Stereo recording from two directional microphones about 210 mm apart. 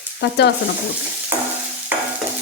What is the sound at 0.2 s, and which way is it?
Speech, 55° left (ahead or behind).